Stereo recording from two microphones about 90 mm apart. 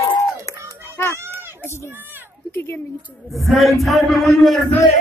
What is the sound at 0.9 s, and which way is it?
Children playing, 30° left (ahead or behind).